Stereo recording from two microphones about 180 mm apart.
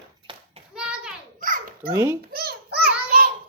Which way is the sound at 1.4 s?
50° right (ahead or behind).